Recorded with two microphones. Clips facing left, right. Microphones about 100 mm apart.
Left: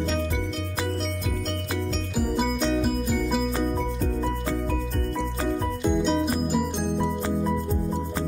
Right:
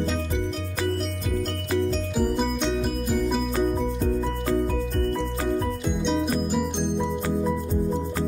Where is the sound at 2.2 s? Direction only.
5° left (ahead or behind).